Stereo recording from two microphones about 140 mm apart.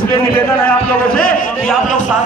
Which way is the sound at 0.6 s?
90° left.